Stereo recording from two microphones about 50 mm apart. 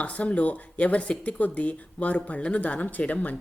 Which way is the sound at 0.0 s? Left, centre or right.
Left.